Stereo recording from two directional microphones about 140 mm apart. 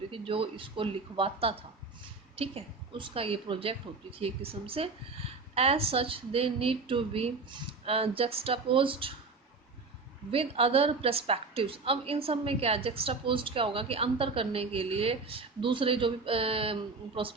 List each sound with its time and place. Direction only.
0.1 s a woman's voice: 40° right (ahead or behind)
10.3 s a woman's voice: 45° right (ahead or behind)